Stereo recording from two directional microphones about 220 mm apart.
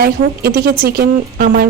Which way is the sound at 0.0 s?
45° right (ahead or behind).